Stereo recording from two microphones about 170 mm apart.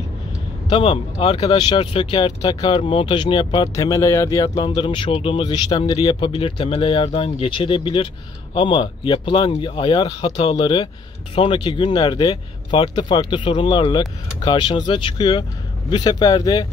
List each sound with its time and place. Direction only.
0.7 s speech: 30° left (ahead or behind)